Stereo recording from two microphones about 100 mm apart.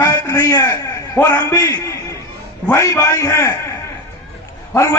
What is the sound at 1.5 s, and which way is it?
A man's voice, 35° left (ahead or behind).